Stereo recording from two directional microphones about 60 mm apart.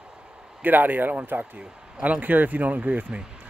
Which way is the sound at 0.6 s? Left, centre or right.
Right.